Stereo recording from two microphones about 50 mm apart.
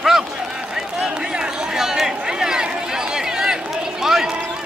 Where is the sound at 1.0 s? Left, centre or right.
Centre.